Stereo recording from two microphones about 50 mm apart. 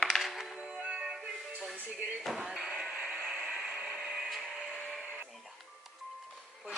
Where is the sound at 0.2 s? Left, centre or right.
Centre.